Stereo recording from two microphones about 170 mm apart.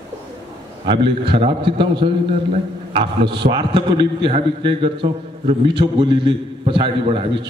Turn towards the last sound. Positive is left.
turn(degrees=-30)  # may be behind; listen again after turning